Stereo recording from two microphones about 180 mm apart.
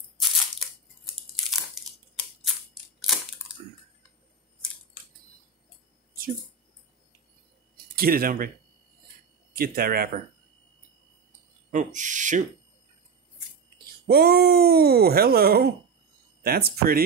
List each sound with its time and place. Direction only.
0.6 s a sound: centre (ahead or behind)
2.4 s scissors: centre (ahead or behind)
7.7 s a sound: 55° right (ahead or behind)
9.6 s speech: 55° right (ahead or behind)
11.7 s speech: 45° right (ahead or behind)
14.0 s speech: 60° right (ahead or behind)